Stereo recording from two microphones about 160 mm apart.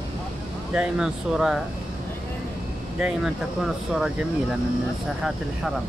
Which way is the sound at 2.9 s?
5° right (ahead or behind).